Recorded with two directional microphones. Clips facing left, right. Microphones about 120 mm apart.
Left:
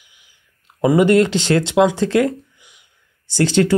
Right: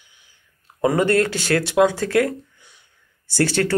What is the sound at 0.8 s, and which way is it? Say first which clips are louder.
Speech: left 5 dB; 15° left (ahead or behind).